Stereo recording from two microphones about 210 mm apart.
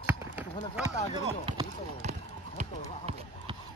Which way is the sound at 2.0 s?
35° right (ahead or behind).